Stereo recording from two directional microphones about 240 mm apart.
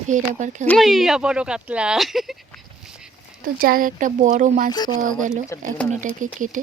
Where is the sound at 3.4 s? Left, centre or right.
Right.